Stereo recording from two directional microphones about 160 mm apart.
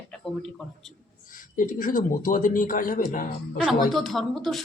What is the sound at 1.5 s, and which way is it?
Speech, 55° left (ahead or behind).